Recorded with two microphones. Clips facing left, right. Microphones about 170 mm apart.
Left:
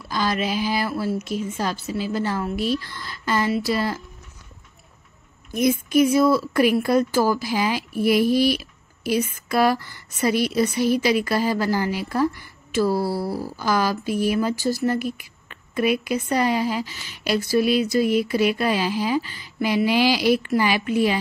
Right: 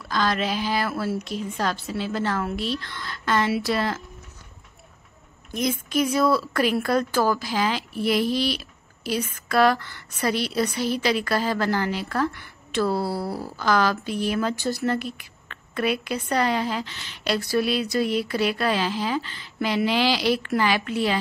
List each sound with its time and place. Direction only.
0.1 s speech: 10° left (ahead or behind)
5.7 s speech: 10° left (ahead or behind)
17.6 s a sound: 45° left (ahead or behind)
18.1 s speech: 10° left (ahead or behind)